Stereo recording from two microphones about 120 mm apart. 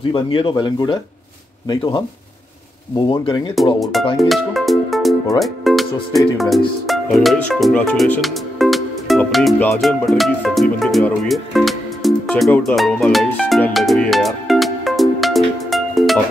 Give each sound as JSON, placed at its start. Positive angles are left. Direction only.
{"t": 0.1, "sound": "speech", "side_deg": 45}
{"t": 3.6, "sound": "music", "side_deg": 0}
{"t": 5.4, "sound": "speech", "side_deg": 0}
{"t": 6.9, "sound": "music", "side_deg": 0}
{"t": 11.2, "sound": "speech", "side_deg": 0}
{"t": 13.7, "sound": "music", "side_deg": 5}